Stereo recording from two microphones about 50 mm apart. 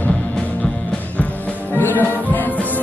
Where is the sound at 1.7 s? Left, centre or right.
Left.